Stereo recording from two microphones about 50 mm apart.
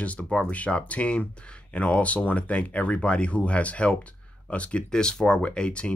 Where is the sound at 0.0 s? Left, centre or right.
Left.